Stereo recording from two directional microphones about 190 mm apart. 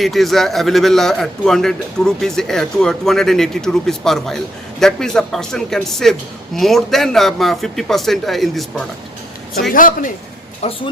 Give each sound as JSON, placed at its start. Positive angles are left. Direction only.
{"t": 0.0, "sound": "a man's voice", "side_deg": 0}
{"t": 9.7, "sound": "speech", "side_deg": 45}
{"t": 10.6, "sound": "speech", "side_deg": 30}